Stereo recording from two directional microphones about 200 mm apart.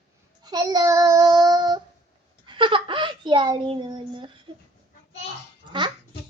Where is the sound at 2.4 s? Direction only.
25° right (ahead or behind).